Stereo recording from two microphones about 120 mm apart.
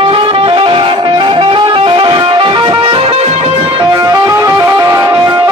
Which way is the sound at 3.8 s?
30° right (ahead or behind).